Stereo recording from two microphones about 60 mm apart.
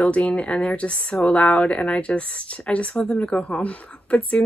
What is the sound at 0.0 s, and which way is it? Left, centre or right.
A woman's voice, centre.